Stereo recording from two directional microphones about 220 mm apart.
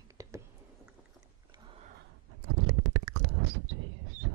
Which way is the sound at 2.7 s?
90° right.